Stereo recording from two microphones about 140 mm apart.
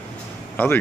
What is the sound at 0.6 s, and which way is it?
Speech, 15° left (ahead or behind).